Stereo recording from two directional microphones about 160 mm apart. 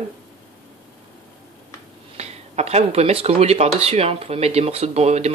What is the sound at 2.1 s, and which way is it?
Speech, 40° right (ahead or behind).